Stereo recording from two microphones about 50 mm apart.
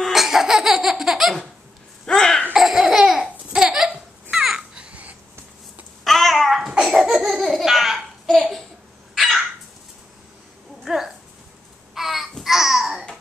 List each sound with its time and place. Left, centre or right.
0.1 s laughter: centre
2.0 s cough: centre
2.5 s laughter: centre
4.3 s babbling: centre
6.0 s a sound: centre
6.8 s laughter: centre
10.8 s a sound: centre
11.9 s babbling: centre